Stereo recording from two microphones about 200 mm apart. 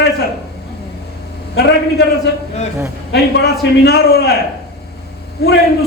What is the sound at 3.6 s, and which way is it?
Speech, 55° left (ahead or behind).